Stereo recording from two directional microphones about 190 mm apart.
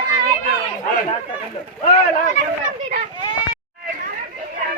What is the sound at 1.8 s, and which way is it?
Speech, 40° left (ahead or behind).